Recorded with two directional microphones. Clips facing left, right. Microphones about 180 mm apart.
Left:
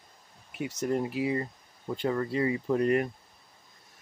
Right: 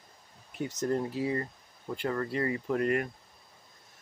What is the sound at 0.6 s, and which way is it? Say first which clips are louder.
Speech: left 1 dB; 10° left (ahead or behind).